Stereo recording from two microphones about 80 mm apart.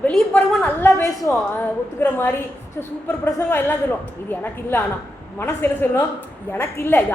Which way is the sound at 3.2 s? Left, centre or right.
Left.